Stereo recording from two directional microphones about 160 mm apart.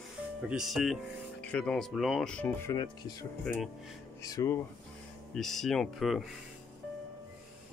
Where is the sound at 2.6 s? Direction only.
25° left (ahead or behind).